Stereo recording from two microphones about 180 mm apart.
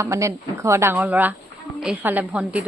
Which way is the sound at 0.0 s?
15° right (ahead or behind).